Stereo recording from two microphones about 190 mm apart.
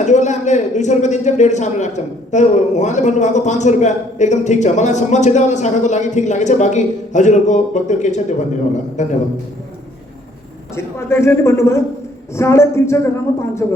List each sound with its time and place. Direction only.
0.0 s a man's voice: 40° left (ahead or behind)
10.8 s a woman's voice: 15° left (ahead or behind)